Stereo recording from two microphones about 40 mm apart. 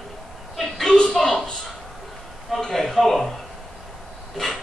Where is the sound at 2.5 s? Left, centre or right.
Centre.